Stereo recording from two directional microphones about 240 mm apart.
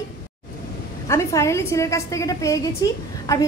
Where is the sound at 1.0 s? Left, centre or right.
Centre.